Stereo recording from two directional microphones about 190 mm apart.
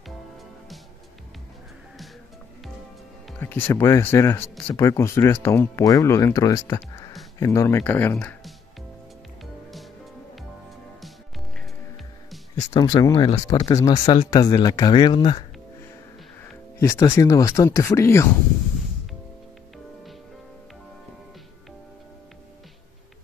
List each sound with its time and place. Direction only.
3.3 s speech: 10° left (ahead or behind)
12.7 s speech: 20° left (ahead or behind)
16.8 s speech: 15° left (ahead or behind)